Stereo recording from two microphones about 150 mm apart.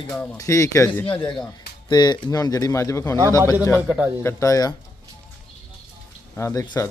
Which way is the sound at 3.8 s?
10° right (ahead or behind).